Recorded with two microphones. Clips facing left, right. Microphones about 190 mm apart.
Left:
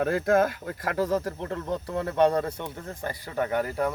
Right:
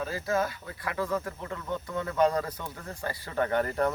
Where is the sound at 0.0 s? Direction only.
60° left (ahead or behind).